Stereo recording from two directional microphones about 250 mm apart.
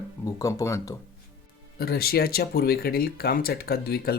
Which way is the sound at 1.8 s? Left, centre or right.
Left.